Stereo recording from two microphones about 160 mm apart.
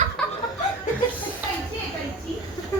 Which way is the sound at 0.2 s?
5° left (ahead or behind).